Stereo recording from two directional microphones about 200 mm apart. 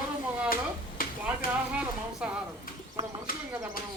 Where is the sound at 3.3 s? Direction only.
45° left (ahead or behind).